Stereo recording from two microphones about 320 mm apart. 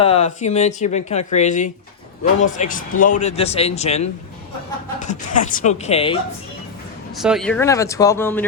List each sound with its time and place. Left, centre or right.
0.0 s speech: centre
7.2 s speech: centre